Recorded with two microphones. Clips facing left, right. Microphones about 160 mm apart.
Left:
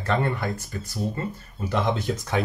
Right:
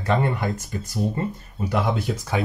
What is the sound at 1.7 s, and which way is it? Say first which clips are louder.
Speech: right 1 dB; 5° right (ahead or behind).